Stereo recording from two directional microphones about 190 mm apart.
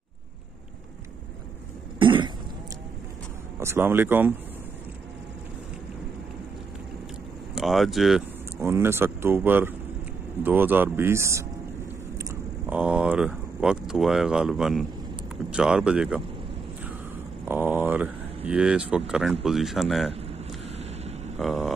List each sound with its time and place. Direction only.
2.0 s cough: 25° right (ahead or behind)
3.5 s speech: 15° right (ahead or behind)
7.5 s speech: centre (ahead or behind)
8.5 s speech: 15° right (ahead or behind)
12.2 s a sound: 5° right (ahead or behind)
15.5 s speech: 5° right (ahead or behind)
17.5 s a sound: 10° right (ahead or behind)
19.4 s speech: centre (ahead or behind)
20.1 s vehicle: 35° right (ahead or behind)
21.4 s speech: centre (ahead or behind)